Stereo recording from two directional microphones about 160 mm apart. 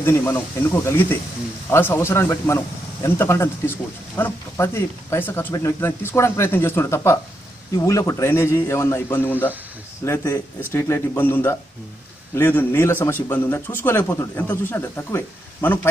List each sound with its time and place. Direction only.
0.0 s a man's voice: 15° left (ahead or behind)